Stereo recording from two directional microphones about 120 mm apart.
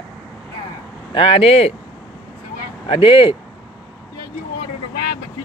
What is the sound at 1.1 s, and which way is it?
Speech, 50° left (ahead or behind).